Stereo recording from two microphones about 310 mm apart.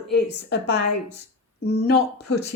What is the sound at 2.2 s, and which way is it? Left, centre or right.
Speech, left.